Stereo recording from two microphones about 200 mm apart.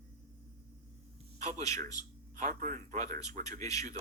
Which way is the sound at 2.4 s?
40° right (ahead or behind).